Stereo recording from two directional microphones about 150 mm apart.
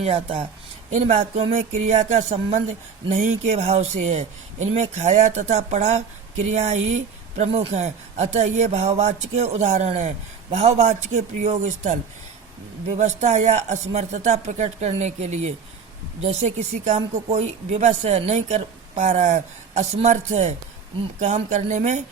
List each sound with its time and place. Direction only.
0.0 s a woman's voice: 40° right (ahead or behind)
13.0 s a woman's voice: 50° right (ahead or behind)